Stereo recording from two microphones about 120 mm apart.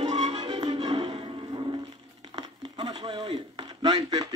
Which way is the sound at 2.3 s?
35° right (ahead or behind).